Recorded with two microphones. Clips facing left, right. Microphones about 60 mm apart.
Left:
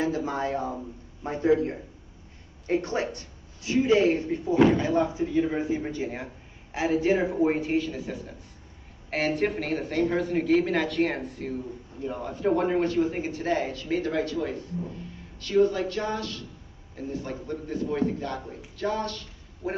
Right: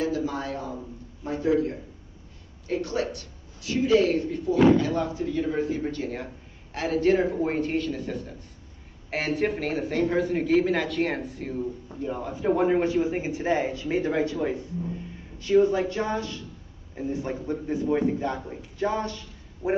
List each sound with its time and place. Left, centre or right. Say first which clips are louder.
0.0 s a man's voice: even; left; by 19.7 s centre